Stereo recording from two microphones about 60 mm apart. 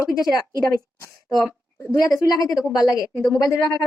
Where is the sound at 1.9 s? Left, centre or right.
Left.